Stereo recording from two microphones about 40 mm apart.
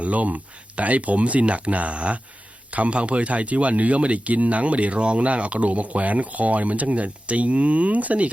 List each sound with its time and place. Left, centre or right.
0.0 s speech: right